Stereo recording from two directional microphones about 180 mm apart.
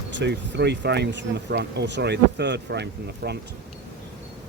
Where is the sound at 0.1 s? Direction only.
75° right (ahead or behind).